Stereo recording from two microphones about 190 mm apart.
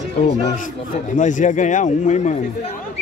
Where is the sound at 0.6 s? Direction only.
40° left (ahead or behind).